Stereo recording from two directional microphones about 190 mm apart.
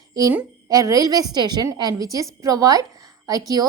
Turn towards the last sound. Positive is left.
turn(degrees=-20)  # may be behind; listen again after turning